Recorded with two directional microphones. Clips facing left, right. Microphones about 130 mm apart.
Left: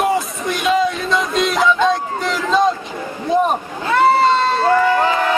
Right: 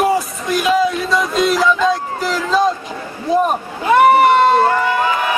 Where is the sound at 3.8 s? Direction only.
15° right (ahead or behind).